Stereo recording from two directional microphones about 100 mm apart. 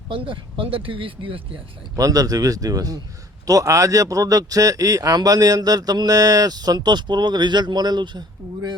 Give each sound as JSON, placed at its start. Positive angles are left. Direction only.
{"t": 0.1, "sound": "speech", "side_deg": -60}
{"t": 2.0, "sound": "a man's voice", "side_deg": -35}